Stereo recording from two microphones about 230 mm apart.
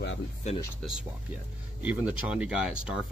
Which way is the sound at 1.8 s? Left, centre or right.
Centre.